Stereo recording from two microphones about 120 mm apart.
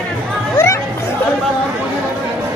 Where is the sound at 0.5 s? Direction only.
20° left (ahead or behind).